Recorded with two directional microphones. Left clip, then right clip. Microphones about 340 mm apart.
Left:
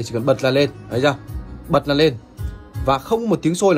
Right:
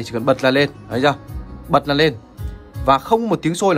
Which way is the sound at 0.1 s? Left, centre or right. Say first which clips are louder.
Right 1 dB; right.